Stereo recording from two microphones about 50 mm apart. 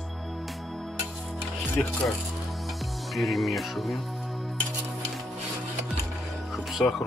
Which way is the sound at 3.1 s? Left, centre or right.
Centre.